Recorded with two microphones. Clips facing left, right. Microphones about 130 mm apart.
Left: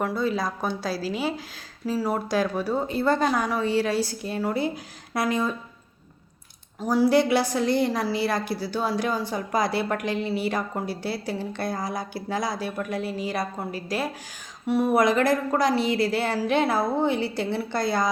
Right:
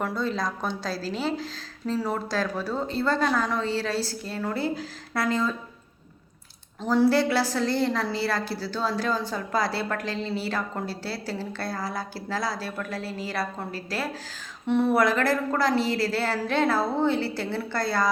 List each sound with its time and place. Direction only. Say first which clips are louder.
0.0 s a woman's voice: left 2 dB; 5° left (ahead or behind)
6.8 s a woman's voice: left 1 dB; 10° left (ahead or behind)